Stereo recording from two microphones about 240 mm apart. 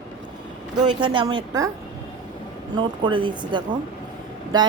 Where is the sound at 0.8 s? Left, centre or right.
Right.